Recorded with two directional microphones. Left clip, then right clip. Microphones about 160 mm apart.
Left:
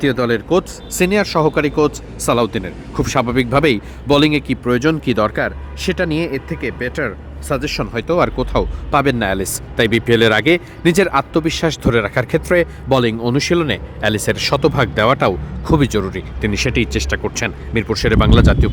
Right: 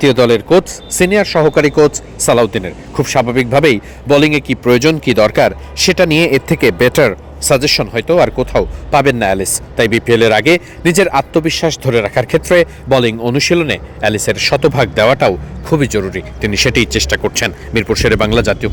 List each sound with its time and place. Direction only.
0.0 s a man's voice: 15° right (ahead or behind)
6.5 s speech: 35° right (ahead or behind)
7.4 s speech: 20° right (ahead or behind)
7.9 s speech: centre (ahead or behind)